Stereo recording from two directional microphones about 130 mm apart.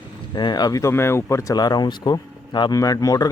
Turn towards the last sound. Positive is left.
turn(degrees=30)  # may be behind; listen again after turning